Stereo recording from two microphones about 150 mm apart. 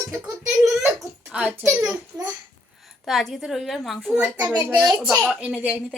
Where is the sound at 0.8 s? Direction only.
Centre (ahead or behind).